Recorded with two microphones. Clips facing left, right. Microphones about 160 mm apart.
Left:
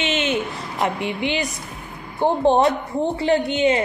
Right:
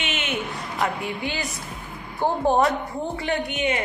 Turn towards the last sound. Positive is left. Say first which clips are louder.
# left 7 dB
turn(degrees=30)  # may be behind; listen again after turning